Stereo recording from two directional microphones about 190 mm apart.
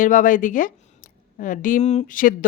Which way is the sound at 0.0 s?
45° left (ahead or behind).